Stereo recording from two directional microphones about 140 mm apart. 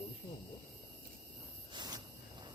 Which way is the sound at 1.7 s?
25° right (ahead or behind).